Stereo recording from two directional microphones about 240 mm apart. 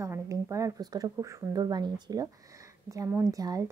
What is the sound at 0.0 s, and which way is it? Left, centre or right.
Speech, centre.